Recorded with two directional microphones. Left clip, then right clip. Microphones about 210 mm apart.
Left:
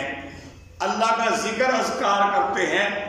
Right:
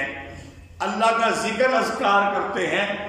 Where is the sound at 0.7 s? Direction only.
Centre (ahead or behind).